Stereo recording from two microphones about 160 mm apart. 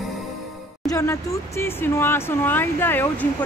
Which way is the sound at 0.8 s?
20° left (ahead or behind).